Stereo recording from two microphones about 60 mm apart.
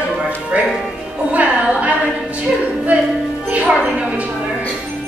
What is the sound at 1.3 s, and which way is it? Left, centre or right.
Music, right.